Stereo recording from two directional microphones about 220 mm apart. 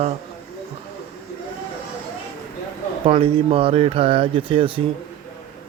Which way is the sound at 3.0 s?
25° right (ahead or behind).